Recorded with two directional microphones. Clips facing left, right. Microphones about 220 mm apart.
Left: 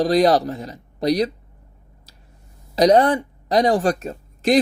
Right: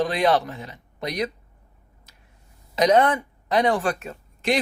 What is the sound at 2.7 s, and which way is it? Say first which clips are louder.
Speech: left 4 dB; 35° left (ahead or behind).